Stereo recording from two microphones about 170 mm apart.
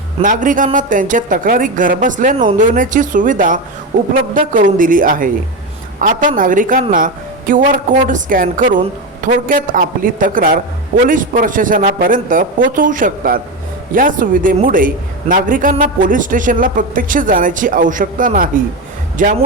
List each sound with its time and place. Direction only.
0.2 s speech: 50° right (ahead or behind)